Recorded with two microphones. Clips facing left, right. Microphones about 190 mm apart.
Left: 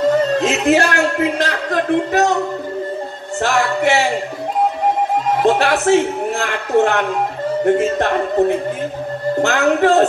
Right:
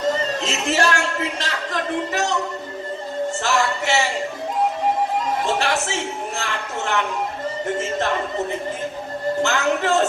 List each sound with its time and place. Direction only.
0.4 s a man's voice: 55° left (ahead or behind)
3.3 s music: 55° left (ahead or behind)
5.4 s speech: 55° left (ahead or behind)
7.6 s music: 60° left (ahead or behind)